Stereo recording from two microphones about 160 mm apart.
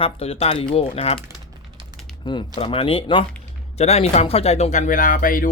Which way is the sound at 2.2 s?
30° left (ahead or behind).